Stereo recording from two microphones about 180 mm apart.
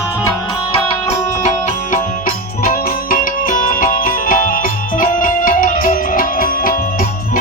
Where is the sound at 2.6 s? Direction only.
50° left (ahead or behind).